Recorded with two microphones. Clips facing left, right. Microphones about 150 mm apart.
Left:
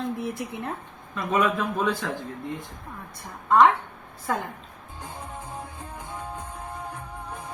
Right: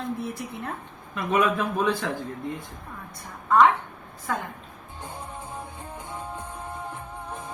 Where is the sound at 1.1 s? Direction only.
10° right (ahead or behind).